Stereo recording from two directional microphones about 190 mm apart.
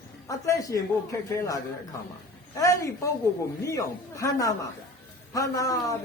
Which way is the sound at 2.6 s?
15° left (ahead or behind).